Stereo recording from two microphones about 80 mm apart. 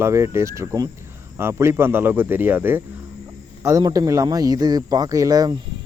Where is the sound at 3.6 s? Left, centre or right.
Right.